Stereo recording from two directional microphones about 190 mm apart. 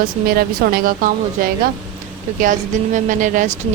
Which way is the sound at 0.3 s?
50° right (ahead or behind).